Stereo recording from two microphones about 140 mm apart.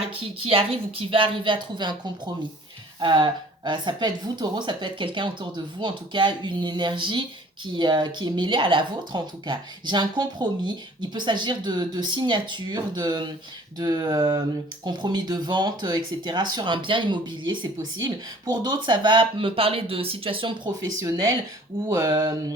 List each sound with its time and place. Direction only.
0.2 s speech: 40° right (ahead or behind)
21.0 s speech: 25° right (ahead or behind)